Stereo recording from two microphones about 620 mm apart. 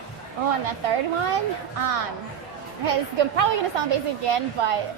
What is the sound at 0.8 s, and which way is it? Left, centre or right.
Speech, right.